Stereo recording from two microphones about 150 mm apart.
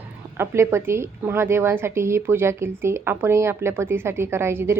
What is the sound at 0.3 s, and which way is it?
A woman's voice, 15° right (ahead or behind).